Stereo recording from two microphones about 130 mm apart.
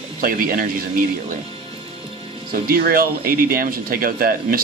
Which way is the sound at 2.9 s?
90° right.